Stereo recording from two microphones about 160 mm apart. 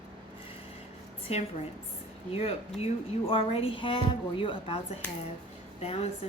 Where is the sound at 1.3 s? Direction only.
40° left (ahead or behind).